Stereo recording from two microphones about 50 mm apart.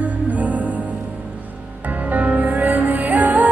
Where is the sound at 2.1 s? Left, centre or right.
Right.